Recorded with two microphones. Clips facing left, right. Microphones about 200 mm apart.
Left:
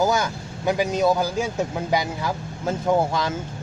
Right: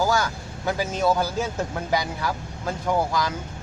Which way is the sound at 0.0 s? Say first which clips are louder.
Left 2 dB; 20° left (ahead or behind).